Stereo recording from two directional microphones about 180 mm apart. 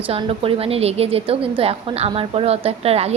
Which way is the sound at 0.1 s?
30° right (ahead or behind).